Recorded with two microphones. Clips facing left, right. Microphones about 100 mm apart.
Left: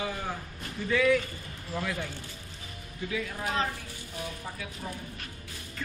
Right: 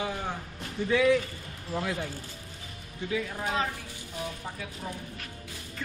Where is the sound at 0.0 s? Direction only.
15° right (ahead or behind).